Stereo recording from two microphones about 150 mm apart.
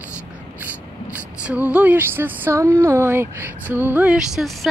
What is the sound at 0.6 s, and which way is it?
Speech, 10° right (ahead or behind).